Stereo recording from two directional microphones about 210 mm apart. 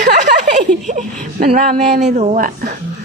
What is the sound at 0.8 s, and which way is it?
Speech, 35° right (ahead or behind).